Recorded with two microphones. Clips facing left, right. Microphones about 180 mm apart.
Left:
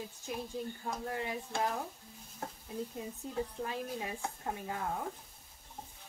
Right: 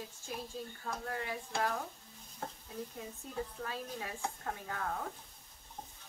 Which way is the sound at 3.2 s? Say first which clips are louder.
Left 3 dB; 20° left (ahead or behind).